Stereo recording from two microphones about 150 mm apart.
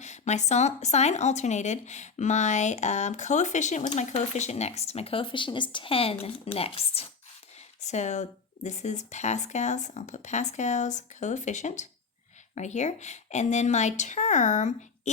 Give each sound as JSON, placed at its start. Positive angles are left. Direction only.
{"t": 0.0, "sound": "speech", "side_deg": 50}